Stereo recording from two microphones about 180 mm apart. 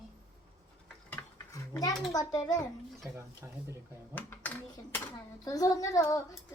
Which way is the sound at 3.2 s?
15° right (ahead or behind).